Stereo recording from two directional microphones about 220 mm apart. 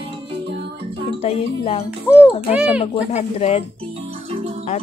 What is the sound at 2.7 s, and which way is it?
Speech, 30° left (ahead or behind).